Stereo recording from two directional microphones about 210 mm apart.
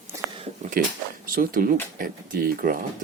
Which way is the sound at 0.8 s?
40° right (ahead or behind).